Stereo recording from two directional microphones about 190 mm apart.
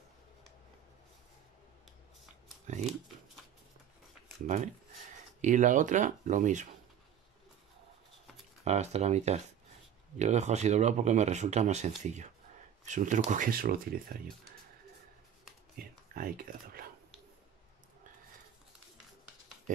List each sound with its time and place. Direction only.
2.6 s speech: 40° right (ahead or behind)
5.4 s speech: 40° right (ahead or behind)
8.6 s speech: 35° right (ahead or behind); by 14.1 s 50° right (ahead or behind)
15.8 s computer keyboard: 50° right (ahead or behind)